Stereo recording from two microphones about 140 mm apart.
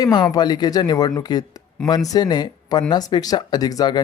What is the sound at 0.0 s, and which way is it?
Speech, 30° left (ahead or behind).